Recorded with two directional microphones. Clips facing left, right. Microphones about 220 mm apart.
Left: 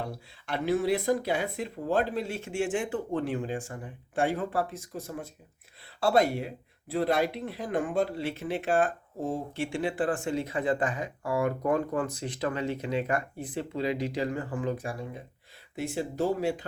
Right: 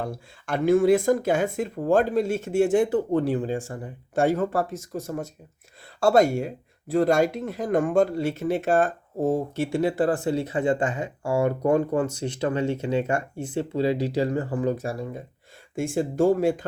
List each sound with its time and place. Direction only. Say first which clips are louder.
0.0 s speech: right 5 dB; 50° right (ahead or behind)
15.7 s speech: right 6 dB; 50° right (ahead or behind)